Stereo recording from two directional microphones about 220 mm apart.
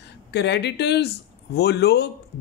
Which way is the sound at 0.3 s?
50° left (ahead or behind).